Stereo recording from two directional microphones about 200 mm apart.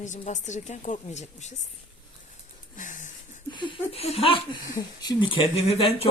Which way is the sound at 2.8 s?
40° left (ahead or behind).